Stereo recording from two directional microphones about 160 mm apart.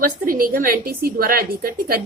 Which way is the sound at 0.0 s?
60° right (ahead or behind).